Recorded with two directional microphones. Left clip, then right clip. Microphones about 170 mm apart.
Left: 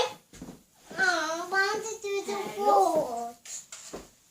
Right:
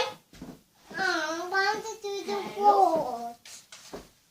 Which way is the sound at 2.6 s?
Centre (ahead or behind).